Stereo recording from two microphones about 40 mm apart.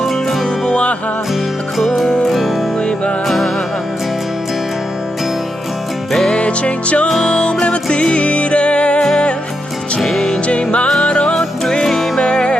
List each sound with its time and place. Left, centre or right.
0.0 s music: centre
0.7 s music: left
2.0 s music: centre
2.8 s music: left
3.2 s music: centre
6.3 s music: left
10.0 s music: centre
10.2 s music: left
11.3 s music: centre
12.2 s music: left